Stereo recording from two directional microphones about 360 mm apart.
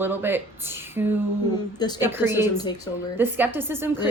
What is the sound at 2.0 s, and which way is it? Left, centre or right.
A woman's voice, centre.